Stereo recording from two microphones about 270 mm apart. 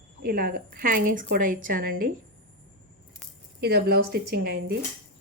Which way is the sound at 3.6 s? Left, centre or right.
Right.